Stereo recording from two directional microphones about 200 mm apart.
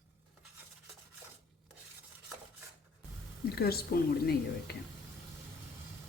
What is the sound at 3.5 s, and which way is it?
Speech, 50° left (ahead or behind).